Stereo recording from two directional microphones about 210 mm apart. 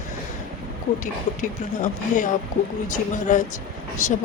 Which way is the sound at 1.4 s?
40° left (ahead or behind).